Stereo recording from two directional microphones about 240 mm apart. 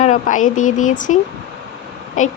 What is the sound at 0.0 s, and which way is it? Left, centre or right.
Speech, left.